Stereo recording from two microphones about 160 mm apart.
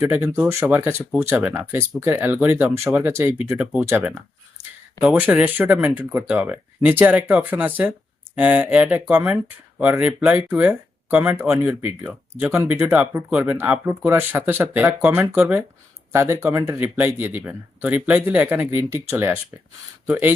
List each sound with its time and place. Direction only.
0.0 s speech: 15° right (ahead or behind)